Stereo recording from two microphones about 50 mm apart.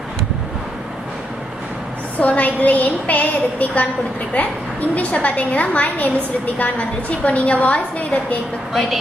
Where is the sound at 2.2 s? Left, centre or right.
Left.